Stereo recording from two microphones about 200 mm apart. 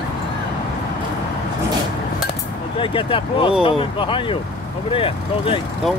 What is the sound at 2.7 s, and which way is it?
Speech, 25° left (ahead or behind).